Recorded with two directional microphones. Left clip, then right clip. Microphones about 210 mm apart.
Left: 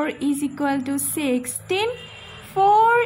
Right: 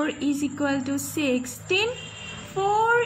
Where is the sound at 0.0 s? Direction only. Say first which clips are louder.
Left 2 dB; 30° left (ahead or behind).